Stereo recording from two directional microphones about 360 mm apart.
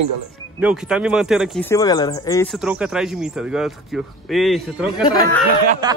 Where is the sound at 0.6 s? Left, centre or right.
Centre.